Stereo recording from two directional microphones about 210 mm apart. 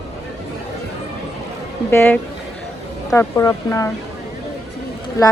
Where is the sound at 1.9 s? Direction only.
10° left (ahead or behind).